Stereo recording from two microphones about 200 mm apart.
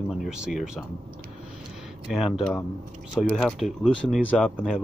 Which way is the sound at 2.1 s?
Centre (ahead or behind).